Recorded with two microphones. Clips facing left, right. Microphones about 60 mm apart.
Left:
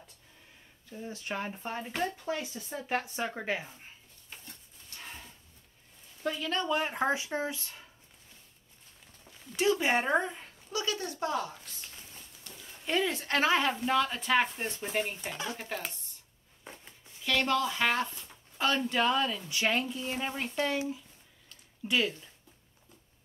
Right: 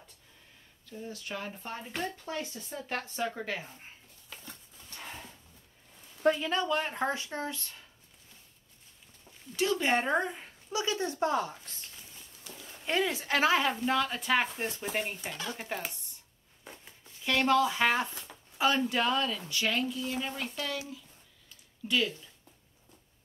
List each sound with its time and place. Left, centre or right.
0.8 s speech: left
1.7 s speech: centre
6.2 s speech: right
6.6 s speech: centre
9.6 s speech: centre
10.7 s speech: right
12.8 s speech: centre
15.2 s speech: centre
15.5 s speech: centre
17.2 s speech: centre
19.5 s speech: left